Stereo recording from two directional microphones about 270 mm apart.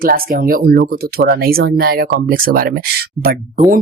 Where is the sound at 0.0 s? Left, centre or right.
Right.